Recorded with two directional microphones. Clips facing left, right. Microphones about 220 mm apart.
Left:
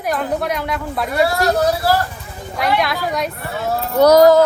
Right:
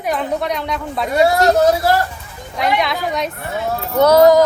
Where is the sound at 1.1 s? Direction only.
20° right (ahead or behind).